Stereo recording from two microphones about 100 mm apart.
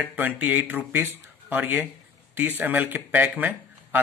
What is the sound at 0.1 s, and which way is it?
Speech, 15° right (ahead or behind).